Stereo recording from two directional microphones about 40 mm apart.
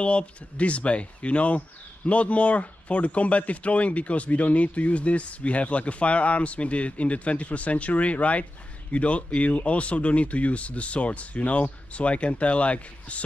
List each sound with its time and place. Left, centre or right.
0.0 s speech: left